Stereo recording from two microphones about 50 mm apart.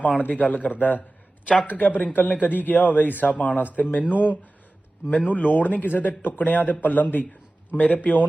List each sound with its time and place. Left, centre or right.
0.2 s a man's voice: left